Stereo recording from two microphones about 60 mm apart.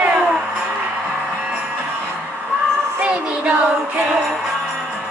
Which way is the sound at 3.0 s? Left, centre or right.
Centre.